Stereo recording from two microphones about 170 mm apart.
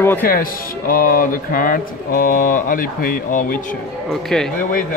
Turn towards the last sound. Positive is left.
turn(degrees=0)  # may be behind; listen again after turning